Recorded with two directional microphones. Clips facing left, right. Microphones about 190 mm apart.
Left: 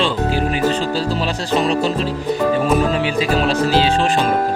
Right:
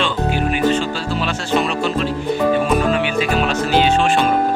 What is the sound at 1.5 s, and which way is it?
Speech, 35° left (ahead or behind).